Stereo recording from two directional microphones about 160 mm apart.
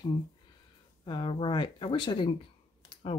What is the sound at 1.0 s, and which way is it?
Speech, 30° left (ahead or behind).